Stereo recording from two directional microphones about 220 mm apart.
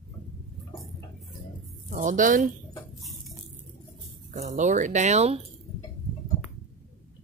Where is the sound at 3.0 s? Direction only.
Centre (ahead or behind).